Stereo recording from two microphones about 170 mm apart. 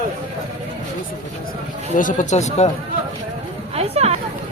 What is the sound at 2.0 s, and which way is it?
Speech, 50° left (ahead or behind).